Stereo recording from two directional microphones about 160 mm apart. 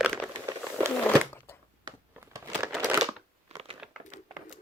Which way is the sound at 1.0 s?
10° left (ahead or behind).